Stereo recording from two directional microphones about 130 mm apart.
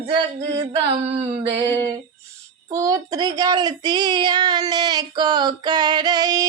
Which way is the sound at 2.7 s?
25° right (ahead or behind).